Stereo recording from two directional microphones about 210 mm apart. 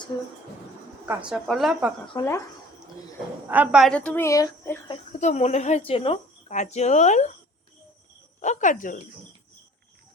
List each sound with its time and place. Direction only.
1.0 s a woman's voice: 5° right (ahead or behind)
2.1 s a woman's voice: 15° left (ahead or behind)
3.5 s a woman's voice: 5° right (ahead or behind); by 4.8 s 15° left (ahead or behind)
5.2 s a woman's voice: 35° left (ahead or behind)
8.4 s a woman's voice: 35° left (ahead or behind)